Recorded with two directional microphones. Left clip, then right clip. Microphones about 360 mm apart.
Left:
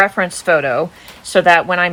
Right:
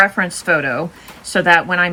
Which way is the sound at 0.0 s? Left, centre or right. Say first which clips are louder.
Even; left.